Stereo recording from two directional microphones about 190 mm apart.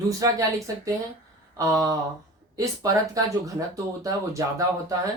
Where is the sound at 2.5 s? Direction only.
20° right (ahead or behind).